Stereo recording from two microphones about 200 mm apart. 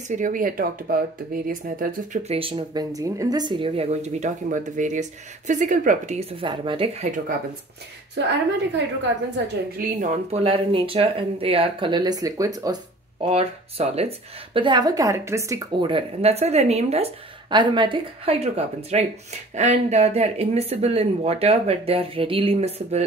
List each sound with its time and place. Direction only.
0.1 s speech: 40° right (ahead or behind)
2.3 s speech: 25° right (ahead or behind)
6.4 s speech: 25° right (ahead or behind)
8.3 s a woman's voice: 65° right (ahead or behind)
9.8 s speech: 40° right (ahead or behind)
10.4 s speech: 25° right (ahead or behind)
13.2 s speech: 30° right (ahead or behind)